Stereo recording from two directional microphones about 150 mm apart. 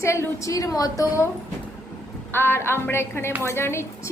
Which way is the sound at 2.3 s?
15° left (ahead or behind).